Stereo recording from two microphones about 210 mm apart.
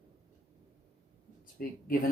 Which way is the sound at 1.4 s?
40° left (ahead or behind).